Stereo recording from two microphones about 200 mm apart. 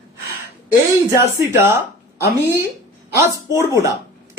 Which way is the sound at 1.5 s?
10° right (ahead or behind).